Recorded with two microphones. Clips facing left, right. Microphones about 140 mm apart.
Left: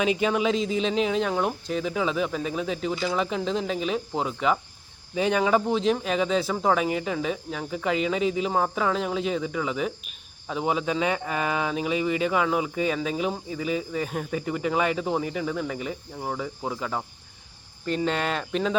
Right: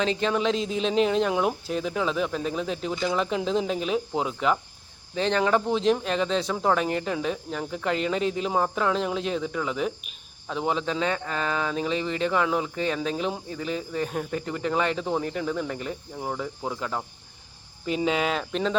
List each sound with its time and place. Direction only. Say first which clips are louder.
0.0 s speech: left 1 dB; 10° left (ahead or behind)